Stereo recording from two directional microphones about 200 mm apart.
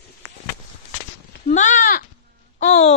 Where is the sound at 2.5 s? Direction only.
35° left (ahead or behind).